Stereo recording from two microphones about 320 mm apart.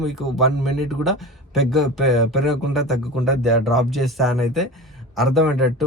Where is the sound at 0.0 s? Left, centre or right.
Centre.